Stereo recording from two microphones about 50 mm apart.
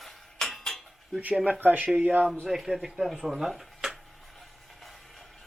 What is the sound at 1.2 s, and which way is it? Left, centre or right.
Speech, right.